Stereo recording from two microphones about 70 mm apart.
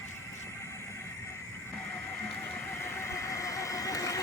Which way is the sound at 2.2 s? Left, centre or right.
Left.